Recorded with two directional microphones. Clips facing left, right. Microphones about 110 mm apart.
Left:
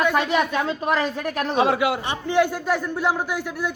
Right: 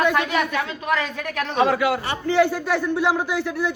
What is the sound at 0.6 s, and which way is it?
Speech, 30° left (ahead or behind).